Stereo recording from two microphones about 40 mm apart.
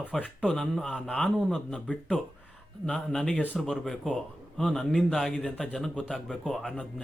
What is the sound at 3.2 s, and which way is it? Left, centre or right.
Speech, left.